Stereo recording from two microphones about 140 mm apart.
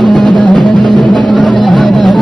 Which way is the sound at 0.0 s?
Centre (ahead or behind).